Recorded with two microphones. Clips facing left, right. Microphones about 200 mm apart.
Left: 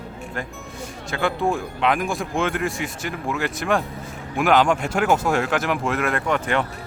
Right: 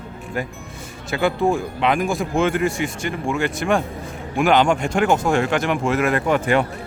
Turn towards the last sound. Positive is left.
turn(degrees=-10)  # may be behind; listen again after turning